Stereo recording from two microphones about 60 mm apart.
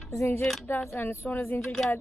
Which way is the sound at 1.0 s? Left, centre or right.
Left.